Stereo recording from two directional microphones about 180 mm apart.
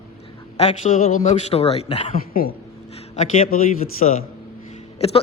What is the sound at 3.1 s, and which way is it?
A man's voice, 40° left (ahead or behind).